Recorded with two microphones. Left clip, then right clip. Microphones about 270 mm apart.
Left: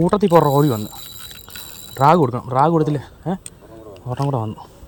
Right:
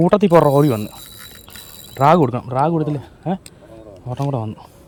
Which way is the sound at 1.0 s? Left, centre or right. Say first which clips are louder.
Left 2 dB; left.